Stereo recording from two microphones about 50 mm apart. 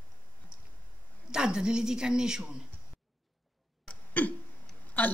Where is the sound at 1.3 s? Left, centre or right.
Centre.